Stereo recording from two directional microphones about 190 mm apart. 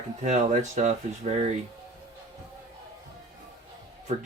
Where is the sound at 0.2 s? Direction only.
35° right (ahead or behind).